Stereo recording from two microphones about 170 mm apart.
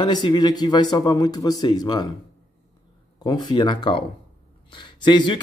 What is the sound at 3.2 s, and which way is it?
Speech, 25° left (ahead or behind).